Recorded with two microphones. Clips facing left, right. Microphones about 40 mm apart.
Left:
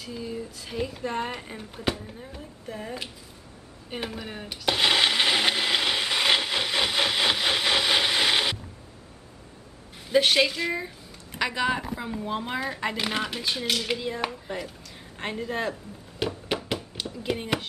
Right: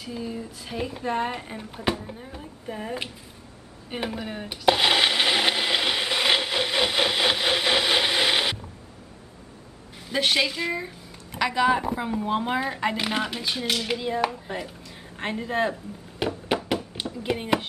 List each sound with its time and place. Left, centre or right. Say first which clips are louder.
0.0 s speech: right 1 dB; centre
3.9 s blender: right 3 dB; centre
10.1 s a woman's voice: left 2 dB; centre
11.9 s speech: right 5 dB; centre
15.1 s a sound: right 4 dB; centre